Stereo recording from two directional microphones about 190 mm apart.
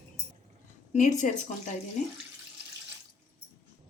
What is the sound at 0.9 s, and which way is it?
Speech, 40° left (ahead or behind).